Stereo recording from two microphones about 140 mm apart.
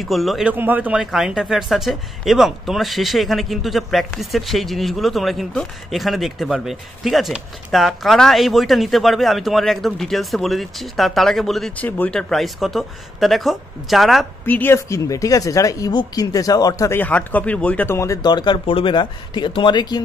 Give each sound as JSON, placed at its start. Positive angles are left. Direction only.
{"t": 0.0, "sound": "speech", "side_deg": 0}
{"t": 0.5, "sound": "speech", "side_deg": -10}
{"t": 14.4, "sound": "speech", "side_deg": 15}
{"t": 17.0, "sound": "speech", "side_deg": 10}